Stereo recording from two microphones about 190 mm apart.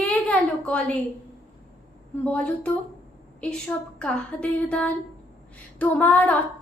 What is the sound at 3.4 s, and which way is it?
A woman's voice, 5° left (ahead or behind).